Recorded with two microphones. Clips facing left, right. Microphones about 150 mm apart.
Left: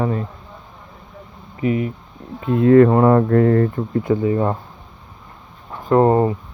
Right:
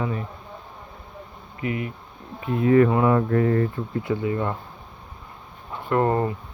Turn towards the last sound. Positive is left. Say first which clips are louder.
# left 7 dB
turn(degrees=25)  # may be behind; listen again after turning